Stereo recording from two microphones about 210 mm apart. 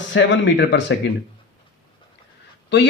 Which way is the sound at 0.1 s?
60° left (ahead or behind).